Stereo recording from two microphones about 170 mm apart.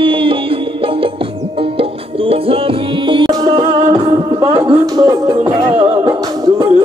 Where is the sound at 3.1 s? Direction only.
25° right (ahead or behind).